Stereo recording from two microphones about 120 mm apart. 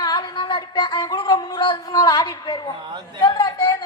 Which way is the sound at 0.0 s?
35° left (ahead or behind).